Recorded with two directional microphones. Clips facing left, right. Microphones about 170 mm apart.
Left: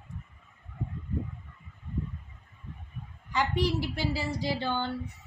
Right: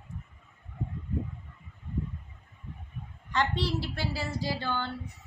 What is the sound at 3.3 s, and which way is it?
A woman's voice, 10° left (ahead or behind).